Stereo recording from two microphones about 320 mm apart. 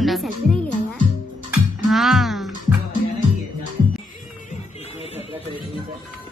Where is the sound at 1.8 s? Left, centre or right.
Centre.